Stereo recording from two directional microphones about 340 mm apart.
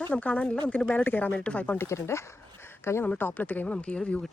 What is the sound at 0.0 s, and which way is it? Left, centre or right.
Speech, centre.